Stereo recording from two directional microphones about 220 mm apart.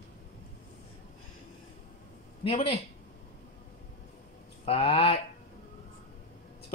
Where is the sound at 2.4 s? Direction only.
25° left (ahead or behind).